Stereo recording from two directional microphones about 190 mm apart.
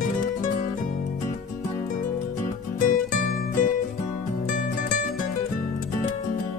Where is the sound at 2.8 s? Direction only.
45° left (ahead or behind).